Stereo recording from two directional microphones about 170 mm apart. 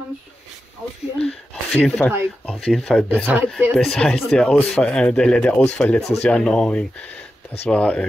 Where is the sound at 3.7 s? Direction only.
5° left (ahead or behind).